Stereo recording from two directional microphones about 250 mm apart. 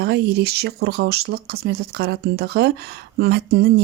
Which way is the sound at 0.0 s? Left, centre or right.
Right.